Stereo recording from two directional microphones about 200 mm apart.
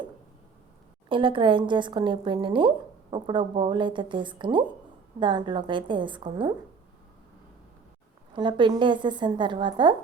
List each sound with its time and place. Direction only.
1.0 s a woman's voice: 25° right (ahead or behind)
8.4 s a woman's voice: 25° right (ahead or behind)